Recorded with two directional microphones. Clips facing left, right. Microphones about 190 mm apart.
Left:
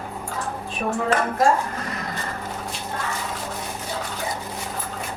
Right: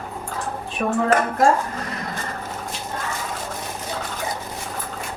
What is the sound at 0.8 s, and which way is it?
Speech, 60° right (ahead or behind).